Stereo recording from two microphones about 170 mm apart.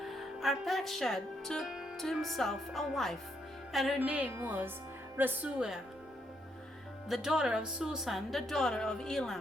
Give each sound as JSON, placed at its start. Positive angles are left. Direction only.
{"t": 0.0, "sound": "speech", "side_deg": 0}
{"t": 3.7, "sound": "music", "side_deg": 0}
{"t": 7.1, "sound": "speech", "side_deg": -5}